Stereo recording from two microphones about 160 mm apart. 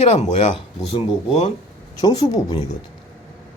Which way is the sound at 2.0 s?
25° left (ahead or behind).